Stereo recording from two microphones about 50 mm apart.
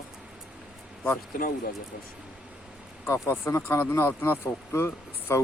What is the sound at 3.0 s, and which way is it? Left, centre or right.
Speech, left.